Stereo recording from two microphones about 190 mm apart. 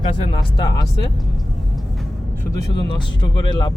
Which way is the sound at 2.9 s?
25° left (ahead or behind).